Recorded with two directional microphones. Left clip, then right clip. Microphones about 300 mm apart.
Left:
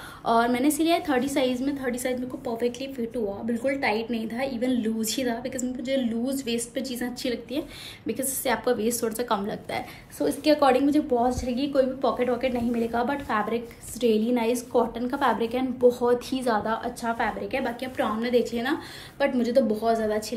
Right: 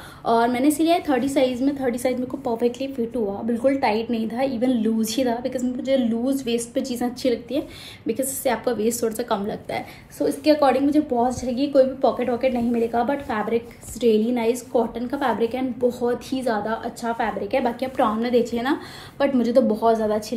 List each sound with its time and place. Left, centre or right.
0.2 s a woman's voice: centre
7.5 s a woman's voice: centre